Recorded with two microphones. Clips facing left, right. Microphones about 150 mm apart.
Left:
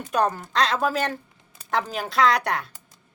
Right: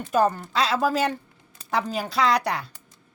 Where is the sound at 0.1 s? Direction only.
5° right (ahead or behind).